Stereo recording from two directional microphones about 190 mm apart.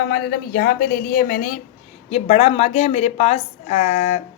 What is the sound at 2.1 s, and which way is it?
A woman's voice, 35° left (ahead or behind).